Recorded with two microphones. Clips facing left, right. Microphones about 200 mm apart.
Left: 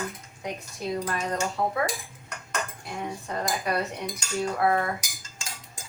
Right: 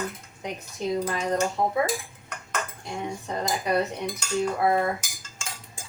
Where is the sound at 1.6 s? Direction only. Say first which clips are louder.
Right 2 dB; 20° right (ahead or behind).